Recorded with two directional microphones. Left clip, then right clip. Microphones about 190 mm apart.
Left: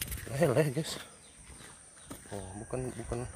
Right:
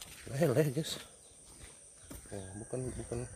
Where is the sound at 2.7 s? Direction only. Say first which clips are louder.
Left 2 dB; 10° right (ahead or behind).